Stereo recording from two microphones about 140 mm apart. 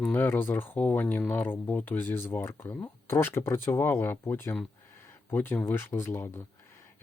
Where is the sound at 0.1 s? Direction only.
15° left (ahead or behind).